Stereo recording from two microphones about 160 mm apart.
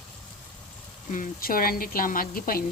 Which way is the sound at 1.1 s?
60° left (ahead or behind).